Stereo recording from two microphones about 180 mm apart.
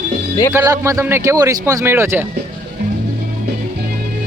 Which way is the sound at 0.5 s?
15° right (ahead or behind).